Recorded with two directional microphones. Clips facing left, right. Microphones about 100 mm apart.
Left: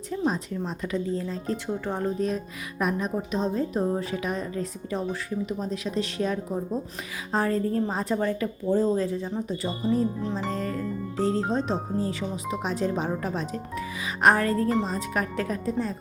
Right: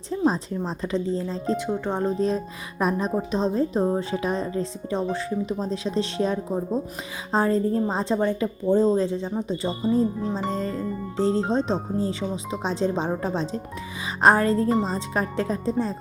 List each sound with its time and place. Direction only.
0.3 s speech: 30° right (ahead or behind)
1.5 s speech: 20° right (ahead or behind)